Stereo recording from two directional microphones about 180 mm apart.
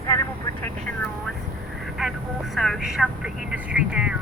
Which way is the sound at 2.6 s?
Centre (ahead or behind).